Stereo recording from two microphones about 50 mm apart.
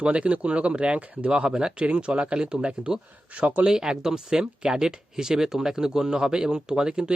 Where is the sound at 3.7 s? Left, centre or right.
Centre.